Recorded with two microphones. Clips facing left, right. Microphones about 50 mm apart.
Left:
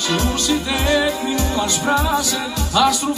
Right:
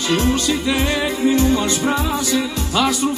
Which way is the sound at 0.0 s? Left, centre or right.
Right.